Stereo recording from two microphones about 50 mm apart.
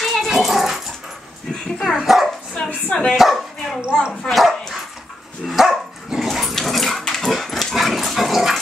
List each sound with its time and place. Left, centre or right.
0.0 s dog: centre
1.5 s dog: centre
2.0 s speech: centre
2.5 s a woman's voice: centre
3.2 s speech: centre
4.1 s a woman's voice: centre
4.4 s dog: centre
6.5 s dog: centre